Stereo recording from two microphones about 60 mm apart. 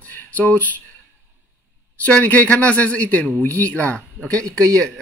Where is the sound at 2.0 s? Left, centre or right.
Left.